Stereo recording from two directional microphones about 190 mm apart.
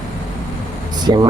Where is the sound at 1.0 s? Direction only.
20° right (ahead or behind).